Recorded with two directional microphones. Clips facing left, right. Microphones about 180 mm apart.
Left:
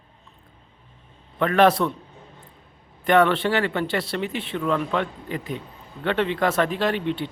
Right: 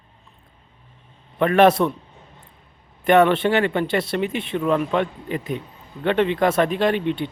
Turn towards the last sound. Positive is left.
turn(degrees=-15)  # may be behind; listen again after turning